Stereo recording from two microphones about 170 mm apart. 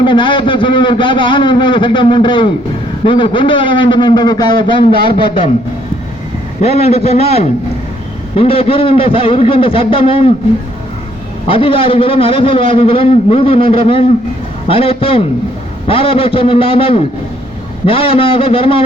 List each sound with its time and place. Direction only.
0.0 s a man's voice: 30° left (ahead or behind)
6.6 s a man's voice: 40° left (ahead or behind)
11.4 s a man's voice: 30° left (ahead or behind)